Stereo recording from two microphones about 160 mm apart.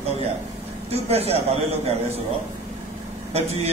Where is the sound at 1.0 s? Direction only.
40° right (ahead or behind).